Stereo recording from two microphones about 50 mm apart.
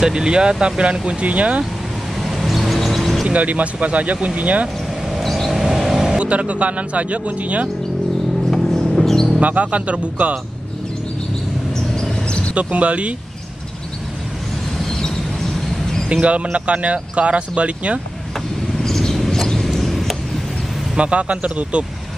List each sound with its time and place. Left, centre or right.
0.0 s speech: centre
2.2 s vehicle: centre
3.3 s speech: right
5.2 s vehicle: centre
6.1 s speech: right
8.5 s music: centre
9.4 s speech: right
11.9 s a sound: centre
12.5 s speech: right
14.9 s vehicle: centre
16.1 s speech: right
18.8 s a sound: centre
20.9 s speech: right